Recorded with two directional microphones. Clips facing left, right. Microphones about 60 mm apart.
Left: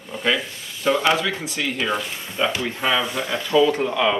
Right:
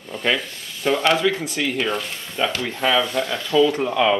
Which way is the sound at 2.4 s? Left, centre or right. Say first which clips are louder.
Even; centre.